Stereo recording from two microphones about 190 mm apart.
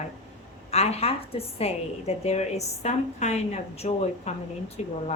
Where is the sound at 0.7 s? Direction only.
35° left (ahead or behind).